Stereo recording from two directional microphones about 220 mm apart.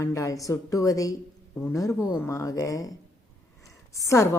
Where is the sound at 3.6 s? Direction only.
15° left (ahead or behind).